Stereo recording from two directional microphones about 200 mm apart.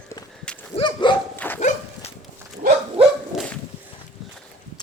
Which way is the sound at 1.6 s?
35° left (ahead or behind).